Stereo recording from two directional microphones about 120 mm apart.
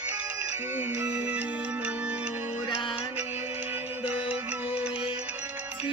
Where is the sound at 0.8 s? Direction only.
15° right (ahead or behind).